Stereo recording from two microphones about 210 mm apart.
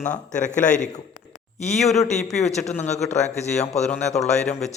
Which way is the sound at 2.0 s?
30° left (ahead or behind).